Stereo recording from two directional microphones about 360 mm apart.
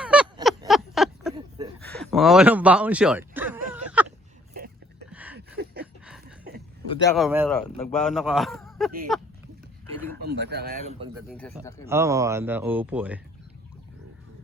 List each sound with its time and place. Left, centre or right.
0.0 s a sound: centre
5.1 s a sound: centre
7.2 s a man's voice: centre
10.2 s speech: right
11.3 s a man's voice: centre
11.9 s a man's voice: centre